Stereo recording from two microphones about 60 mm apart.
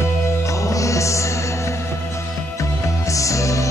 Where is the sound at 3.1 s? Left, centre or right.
Left.